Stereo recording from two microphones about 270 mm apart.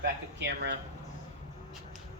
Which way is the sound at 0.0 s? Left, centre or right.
Right.